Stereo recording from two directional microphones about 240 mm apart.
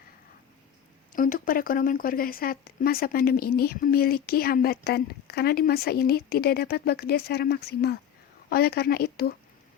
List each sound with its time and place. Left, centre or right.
1.1 s speech: left